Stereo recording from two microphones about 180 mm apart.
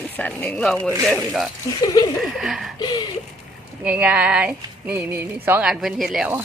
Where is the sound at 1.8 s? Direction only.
20° left (ahead or behind).